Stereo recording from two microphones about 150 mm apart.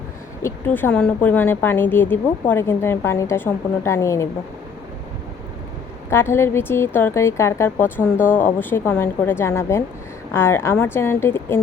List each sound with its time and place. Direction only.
0.4 s a woman's voice: 15° left (ahead or behind)
6.1 s a woman's voice: 15° left (ahead or behind)